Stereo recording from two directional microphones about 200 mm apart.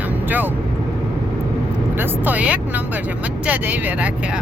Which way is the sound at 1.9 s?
10° right (ahead or behind).